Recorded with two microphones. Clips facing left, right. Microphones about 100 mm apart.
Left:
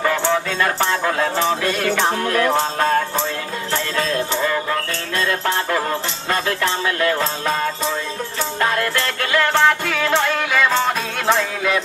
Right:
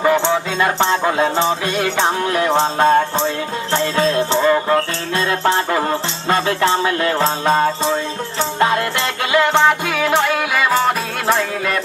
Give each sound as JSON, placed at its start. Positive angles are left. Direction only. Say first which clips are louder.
{"t": 0.6, "sound": "music", "louder": "right 3 dB", "side_deg": -20}